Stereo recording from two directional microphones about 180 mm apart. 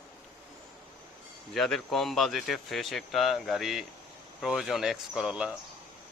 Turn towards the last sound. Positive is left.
turn(degrees=-5)  # may be behind; listen again after turning